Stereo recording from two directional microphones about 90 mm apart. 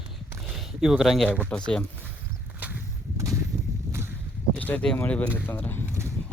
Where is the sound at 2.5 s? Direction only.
20° right (ahead or behind).